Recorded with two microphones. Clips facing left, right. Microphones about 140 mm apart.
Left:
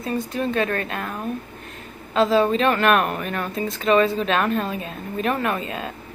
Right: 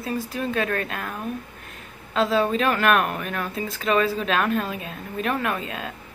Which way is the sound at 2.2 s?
Centre (ahead or behind).